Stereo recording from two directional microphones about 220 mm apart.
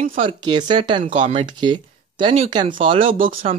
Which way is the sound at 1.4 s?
20° right (ahead or behind).